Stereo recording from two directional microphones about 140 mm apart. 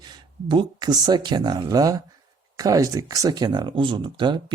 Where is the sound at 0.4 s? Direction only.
30° right (ahead or behind).